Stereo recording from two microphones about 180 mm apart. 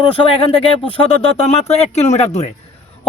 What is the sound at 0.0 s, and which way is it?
Speech, 30° left (ahead or behind).